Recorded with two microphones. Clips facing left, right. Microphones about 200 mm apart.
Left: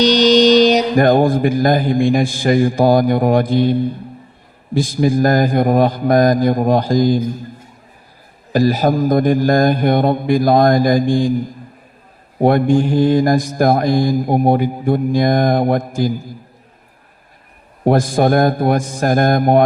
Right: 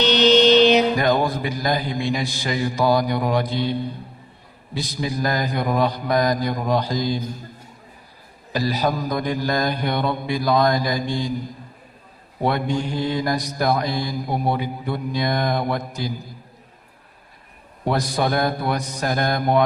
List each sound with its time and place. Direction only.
0.0 s mantra: 40° left (ahead or behind)
8.5 s mantra: 50° left (ahead or behind)
12.4 s mantra: 50° left (ahead or behind)
17.8 s mantra: 50° left (ahead or behind)